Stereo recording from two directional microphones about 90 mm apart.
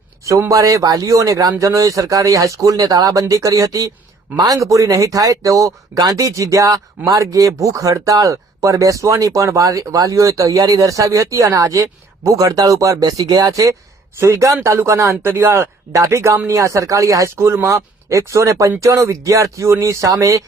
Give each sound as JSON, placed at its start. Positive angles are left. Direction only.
{"t": 0.3, "sound": "speech", "side_deg": -35}